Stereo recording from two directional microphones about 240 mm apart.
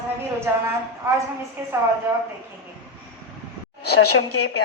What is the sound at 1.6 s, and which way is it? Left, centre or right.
Speech, centre.